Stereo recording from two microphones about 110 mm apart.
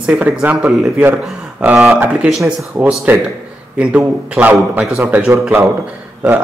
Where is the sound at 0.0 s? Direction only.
10° right (ahead or behind).